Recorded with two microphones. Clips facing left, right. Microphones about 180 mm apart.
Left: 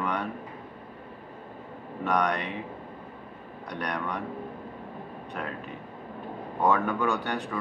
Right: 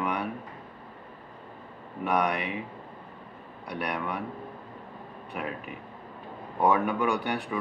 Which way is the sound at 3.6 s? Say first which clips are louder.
Even; 10° right (ahead or behind).